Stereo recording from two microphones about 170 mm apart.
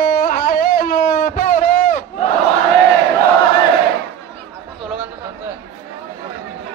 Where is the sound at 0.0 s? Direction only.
60° left (ahead or behind).